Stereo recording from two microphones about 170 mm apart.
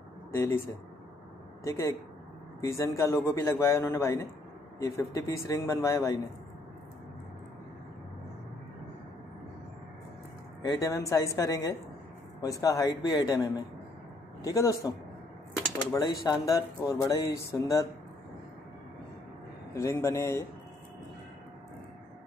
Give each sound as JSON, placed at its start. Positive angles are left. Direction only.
{"t": 0.3, "sound": "speech", "side_deg": 15}
{"t": 1.6, "sound": "a man's voice", "side_deg": 20}
{"t": 10.6, "sound": "speech", "side_deg": 20}
{"t": 19.7, "sound": "a man's voice", "side_deg": 15}